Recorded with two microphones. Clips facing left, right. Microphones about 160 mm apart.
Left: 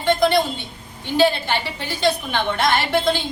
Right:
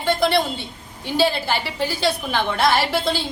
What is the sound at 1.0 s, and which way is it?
Speech, 5° right (ahead or behind).